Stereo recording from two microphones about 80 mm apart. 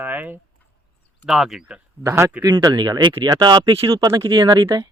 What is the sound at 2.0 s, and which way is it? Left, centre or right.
Speech, right.